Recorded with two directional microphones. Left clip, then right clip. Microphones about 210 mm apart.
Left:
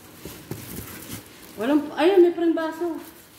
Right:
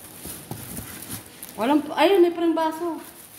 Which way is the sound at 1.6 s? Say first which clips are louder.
Right 2 dB; 50° right (ahead or behind).